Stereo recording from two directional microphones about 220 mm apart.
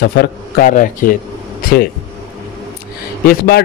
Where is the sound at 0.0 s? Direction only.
45° left (ahead or behind).